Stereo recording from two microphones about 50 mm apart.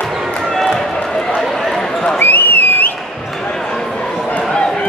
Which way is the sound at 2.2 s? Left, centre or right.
Left.